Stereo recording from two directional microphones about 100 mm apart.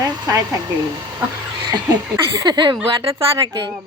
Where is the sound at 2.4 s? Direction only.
40° right (ahead or behind).